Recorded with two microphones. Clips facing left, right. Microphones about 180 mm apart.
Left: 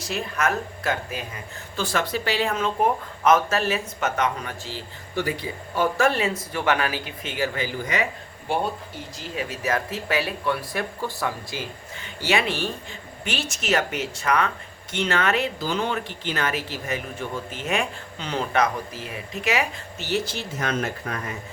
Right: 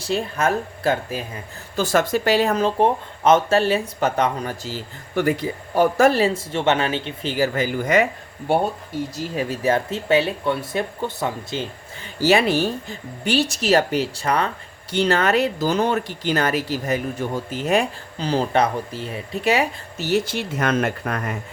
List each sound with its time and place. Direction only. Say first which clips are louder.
0.0 s speech: right 4 dB; 30° right (ahead or behind)
1.7 s speech: right 6 dB; 45° right (ahead or behind)
9.3 s speech: right 5 dB; 35° right (ahead or behind)
12.2 s speech: right 7 dB; 35° right (ahead or behind); by 21.3 s 60° right (ahead or behind)